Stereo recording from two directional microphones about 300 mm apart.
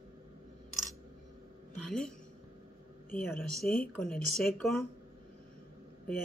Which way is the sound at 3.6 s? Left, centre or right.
Left.